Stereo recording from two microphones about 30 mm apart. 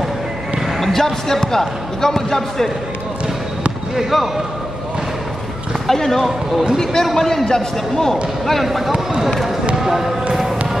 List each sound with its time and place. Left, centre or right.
0.7 s speech: centre
3.9 s speech: centre
5.9 s speech: centre
8.6 s speech: centre
9.8 s basketball bounce: centre